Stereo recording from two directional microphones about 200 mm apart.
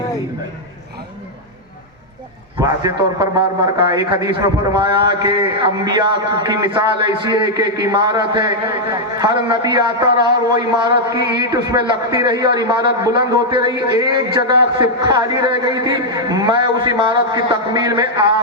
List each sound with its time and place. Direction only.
2.6 s a man's voice: 15° right (ahead or behind)